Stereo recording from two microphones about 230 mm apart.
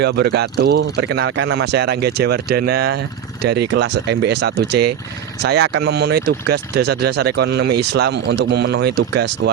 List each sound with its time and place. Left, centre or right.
0.0 s speech: right